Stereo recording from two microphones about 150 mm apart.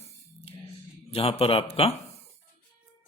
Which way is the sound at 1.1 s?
40° left (ahead or behind).